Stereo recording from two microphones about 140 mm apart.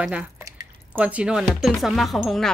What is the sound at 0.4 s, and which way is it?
Drip, 25° right (ahead or behind).